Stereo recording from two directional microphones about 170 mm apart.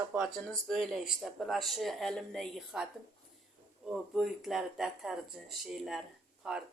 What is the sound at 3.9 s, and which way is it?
Speech, centre (ahead or behind).